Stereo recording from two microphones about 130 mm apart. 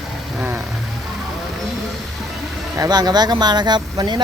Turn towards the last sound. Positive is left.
turn(degrees=-35)  # may be behind; listen again after turning